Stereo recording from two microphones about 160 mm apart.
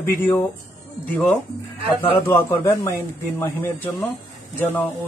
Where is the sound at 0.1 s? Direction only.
15° left (ahead or behind).